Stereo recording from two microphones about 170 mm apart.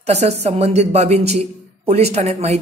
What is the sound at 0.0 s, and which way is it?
A woman's voice, 40° right (ahead or behind).